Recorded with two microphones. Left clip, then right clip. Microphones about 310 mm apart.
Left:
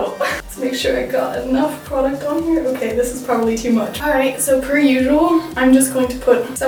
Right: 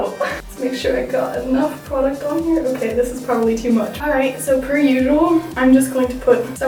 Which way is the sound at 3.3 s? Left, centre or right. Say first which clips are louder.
Even; centre.